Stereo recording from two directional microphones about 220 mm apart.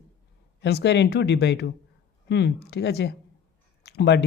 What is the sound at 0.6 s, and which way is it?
Speech, 50° left (ahead or behind).